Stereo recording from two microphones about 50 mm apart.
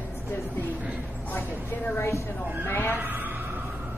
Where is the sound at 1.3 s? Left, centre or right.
Left.